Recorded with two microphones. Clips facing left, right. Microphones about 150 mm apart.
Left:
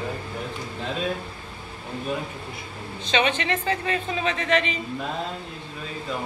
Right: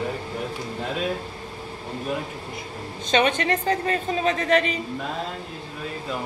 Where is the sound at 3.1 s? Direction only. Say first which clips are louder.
Right 3 dB; 45° right (ahead or behind).